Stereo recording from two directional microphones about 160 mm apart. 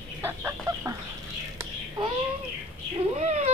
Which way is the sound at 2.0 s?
25° right (ahead or behind).